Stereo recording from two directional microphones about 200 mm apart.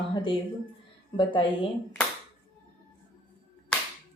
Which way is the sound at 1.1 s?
25° left (ahead or behind).